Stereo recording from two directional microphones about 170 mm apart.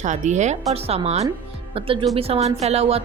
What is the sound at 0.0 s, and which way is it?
A woman's voice, 45° right (ahead or behind).